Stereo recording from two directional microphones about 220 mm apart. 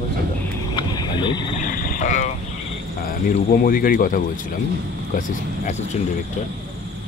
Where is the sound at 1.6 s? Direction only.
40° left (ahead or behind).